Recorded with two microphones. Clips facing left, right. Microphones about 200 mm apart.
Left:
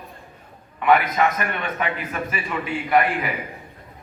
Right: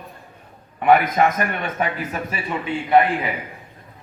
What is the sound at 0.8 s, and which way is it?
A man's voice, 40° right (ahead or behind).